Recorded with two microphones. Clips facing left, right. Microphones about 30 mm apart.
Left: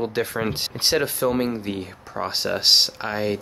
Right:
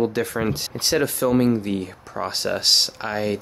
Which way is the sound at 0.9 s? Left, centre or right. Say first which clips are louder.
Right 3 dB; centre.